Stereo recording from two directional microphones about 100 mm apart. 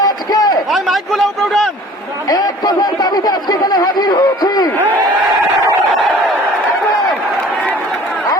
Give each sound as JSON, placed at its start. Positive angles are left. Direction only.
{"t": 0.0, "sound": "a sound", "side_deg": 40}
{"t": 0.7, "sound": "a man's voice", "side_deg": 0}
{"t": 2.3, "sound": "a man's voice", "side_deg": 40}